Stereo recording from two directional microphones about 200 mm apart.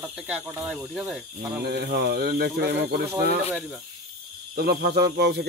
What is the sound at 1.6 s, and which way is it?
Speech, 55° right (ahead or behind).